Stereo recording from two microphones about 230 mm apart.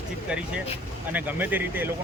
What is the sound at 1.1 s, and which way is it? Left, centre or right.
Speech, centre.